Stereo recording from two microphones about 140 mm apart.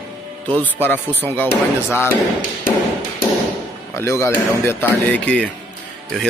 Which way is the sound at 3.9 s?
20° left (ahead or behind).